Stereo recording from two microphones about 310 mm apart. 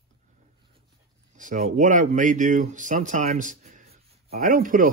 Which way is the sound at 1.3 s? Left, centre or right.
Right.